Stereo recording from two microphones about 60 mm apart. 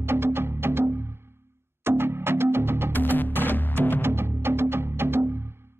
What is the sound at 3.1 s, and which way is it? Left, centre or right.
Music, left.